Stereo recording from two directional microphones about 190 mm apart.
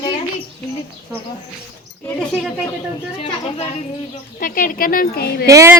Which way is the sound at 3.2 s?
30° left (ahead or behind).